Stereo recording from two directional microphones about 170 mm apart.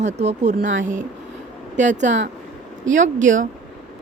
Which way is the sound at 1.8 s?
45° right (ahead or behind).